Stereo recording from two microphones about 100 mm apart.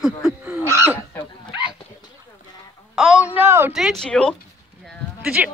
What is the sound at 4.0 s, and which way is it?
Speech, 10° left (ahead or behind).